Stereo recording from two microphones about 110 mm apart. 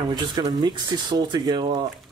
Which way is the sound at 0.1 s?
40° right (ahead or behind).